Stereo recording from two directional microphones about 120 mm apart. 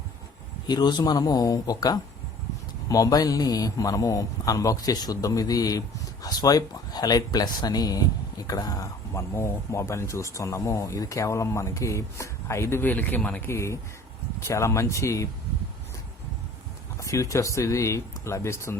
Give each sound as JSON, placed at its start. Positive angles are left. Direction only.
{"t": 0.7, "sound": "speech", "side_deg": 35}
{"t": 17.0, "sound": "speech", "side_deg": 25}